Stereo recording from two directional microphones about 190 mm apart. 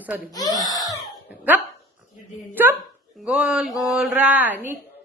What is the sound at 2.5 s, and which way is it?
Speech, 10° right (ahead or behind).